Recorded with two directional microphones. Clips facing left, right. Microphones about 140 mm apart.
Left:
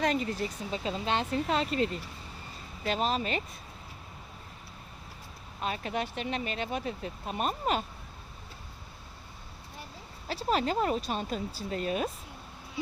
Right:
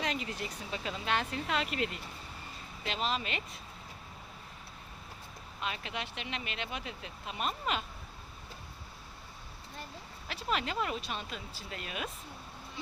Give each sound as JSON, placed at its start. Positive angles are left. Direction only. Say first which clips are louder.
{"t": 0.0, "sound": "speech", "louder": "left 7 dB", "side_deg": 40}
{"t": 5.5, "sound": "speech", "louder": "left 6 dB", "side_deg": 40}
{"t": 10.2, "sound": "speech", "louder": "left 6 dB", "side_deg": 35}